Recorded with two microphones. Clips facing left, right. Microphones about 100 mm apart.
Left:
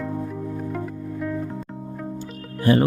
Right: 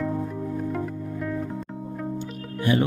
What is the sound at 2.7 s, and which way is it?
Speech, 40° left (ahead or behind).